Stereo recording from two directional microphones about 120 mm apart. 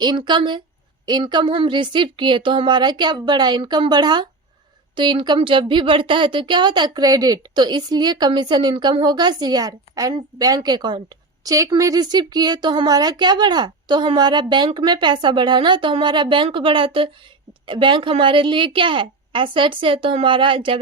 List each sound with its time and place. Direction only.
0.0 s speech: 40° right (ahead or behind)
11.4 s a woman's voice: 30° right (ahead or behind); by 20.7 s 45° right (ahead or behind)